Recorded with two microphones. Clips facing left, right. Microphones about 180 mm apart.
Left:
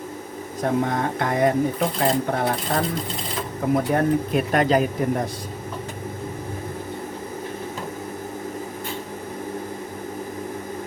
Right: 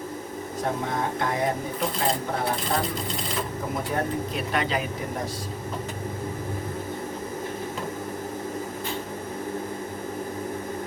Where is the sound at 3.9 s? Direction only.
60° left (ahead or behind).